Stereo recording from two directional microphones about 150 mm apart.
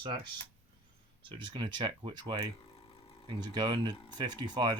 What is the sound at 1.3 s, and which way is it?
Speech, 30° right (ahead or behind).